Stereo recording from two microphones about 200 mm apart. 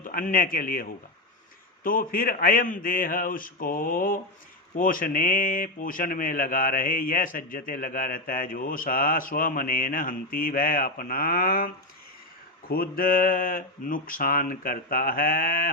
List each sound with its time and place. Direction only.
0.0 s speech: 45° left (ahead or behind)